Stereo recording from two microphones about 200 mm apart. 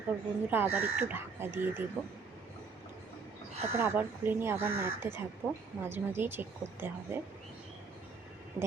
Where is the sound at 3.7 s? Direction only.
10° right (ahead or behind).